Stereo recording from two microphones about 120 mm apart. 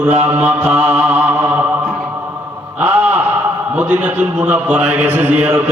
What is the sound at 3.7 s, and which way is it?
A man's voice, 15° right (ahead or behind).